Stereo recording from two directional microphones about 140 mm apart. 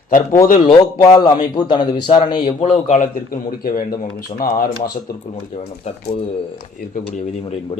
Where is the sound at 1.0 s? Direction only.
45° left (ahead or behind).